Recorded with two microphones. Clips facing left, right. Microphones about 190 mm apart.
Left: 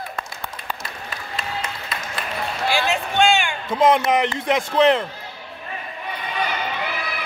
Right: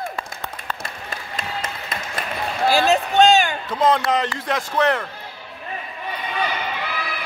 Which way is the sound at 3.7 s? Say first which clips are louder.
Left 4 dB; 20° left (ahead or behind).